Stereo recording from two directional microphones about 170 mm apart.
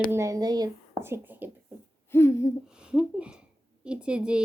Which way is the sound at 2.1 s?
15° left (ahead or behind).